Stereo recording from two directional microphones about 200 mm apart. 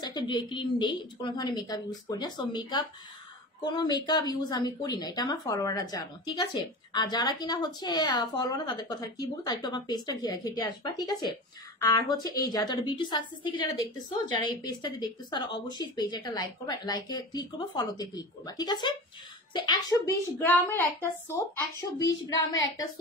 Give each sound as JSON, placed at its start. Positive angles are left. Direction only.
{"t": 0.0, "sound": "a woman's voice", "side_deg": 20}
{"t": 22.0, "sound": "speech", "side_deg": 75}